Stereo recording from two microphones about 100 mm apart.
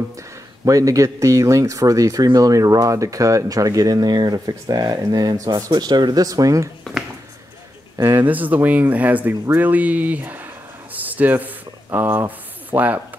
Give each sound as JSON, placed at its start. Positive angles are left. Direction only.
{"t": 0.7, "sound": "speech", "side_deg": -35}
{"t": 8.0, "sound": "speech", "side_deg": -20}
{"t": 10.9, "sound": "a sound", "side_deg": -15}